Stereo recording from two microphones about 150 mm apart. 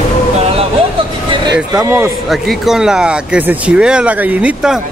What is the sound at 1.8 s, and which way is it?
Speech, 15° right (ahead or behind).